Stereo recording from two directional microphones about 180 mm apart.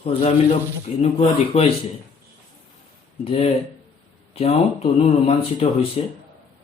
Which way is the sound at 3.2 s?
35° left (ahead or behind).